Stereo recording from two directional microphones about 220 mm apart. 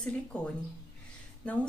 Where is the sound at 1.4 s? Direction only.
5° left (ahead or behind).